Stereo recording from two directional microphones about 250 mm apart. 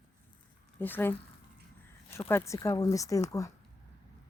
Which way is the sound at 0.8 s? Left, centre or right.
Centre.